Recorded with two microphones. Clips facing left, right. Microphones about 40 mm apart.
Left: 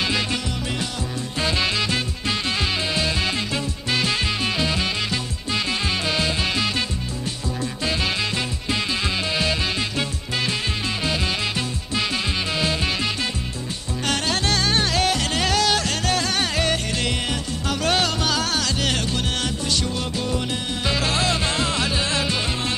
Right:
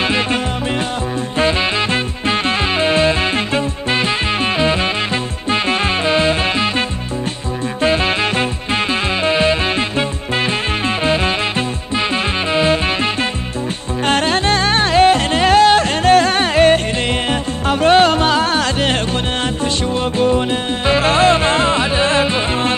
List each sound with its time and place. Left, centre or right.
0.0 s music: right
7.8 s music: right
12.5 s music: right